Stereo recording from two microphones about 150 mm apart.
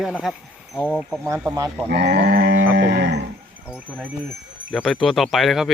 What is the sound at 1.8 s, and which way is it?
Sheep, 90° right.